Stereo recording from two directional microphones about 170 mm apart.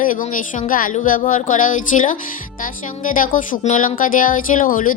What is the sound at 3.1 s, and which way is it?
Speech, 50° left (ahead or behind).